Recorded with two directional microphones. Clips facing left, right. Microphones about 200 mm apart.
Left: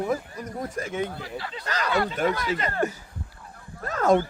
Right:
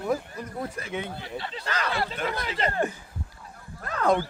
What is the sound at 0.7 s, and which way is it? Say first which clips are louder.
Speech: left 4 dB; 45° left (ahead or behind).